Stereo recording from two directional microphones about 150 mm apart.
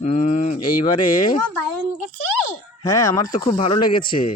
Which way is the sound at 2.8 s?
25° left (ahead or behind).